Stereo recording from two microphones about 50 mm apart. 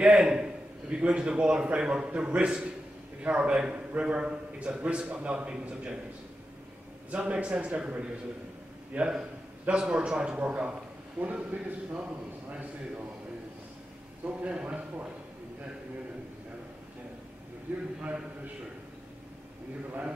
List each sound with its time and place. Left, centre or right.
0.0 s a man's voice: centre
7.1 s a man's voice: right
14.2 s a man's voice: right
18.0 s a man's voice: right